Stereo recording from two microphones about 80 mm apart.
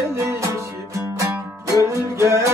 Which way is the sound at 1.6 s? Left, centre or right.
Right.